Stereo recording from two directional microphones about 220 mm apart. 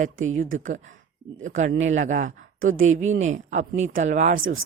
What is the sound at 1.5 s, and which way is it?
Speech, 35° right (ahead or behind).